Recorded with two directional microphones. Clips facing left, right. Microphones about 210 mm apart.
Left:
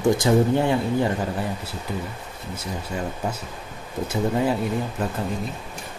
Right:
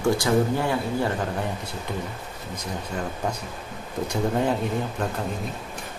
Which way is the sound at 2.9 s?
5° left (ahead or behind).